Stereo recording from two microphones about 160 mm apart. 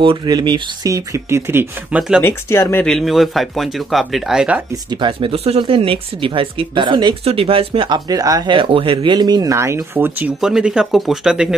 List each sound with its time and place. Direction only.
0.0 s speech: 30° right (ahead or behind); by 2.2 s 5° right (ahead or behind)
2.2 s speech: 15° left (ahead or behind); by 4.6 s 5° right (ahead or behind)
4.8 s speech: 30° right (ahead or behind); by 11.5 s 5° right (ahead or behind)